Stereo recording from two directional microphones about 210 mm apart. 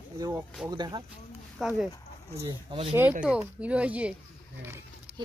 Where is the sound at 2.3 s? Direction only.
25° right (ahead or behind).